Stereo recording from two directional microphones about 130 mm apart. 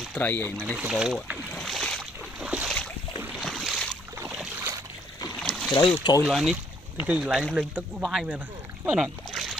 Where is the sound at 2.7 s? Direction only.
5° left (ahead or behind).